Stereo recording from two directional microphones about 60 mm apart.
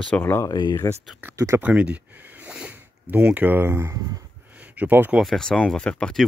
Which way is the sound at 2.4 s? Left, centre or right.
Right.